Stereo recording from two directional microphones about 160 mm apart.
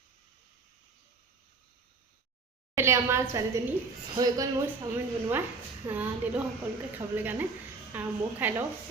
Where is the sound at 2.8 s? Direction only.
15° right (ahead or behind).